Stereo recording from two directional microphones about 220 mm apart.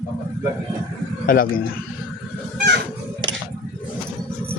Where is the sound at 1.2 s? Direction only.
40° left (ahead or behind).